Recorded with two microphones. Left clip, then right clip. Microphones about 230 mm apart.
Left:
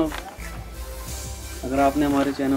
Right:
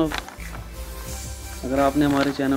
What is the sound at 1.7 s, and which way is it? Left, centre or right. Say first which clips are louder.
Speech: even; right.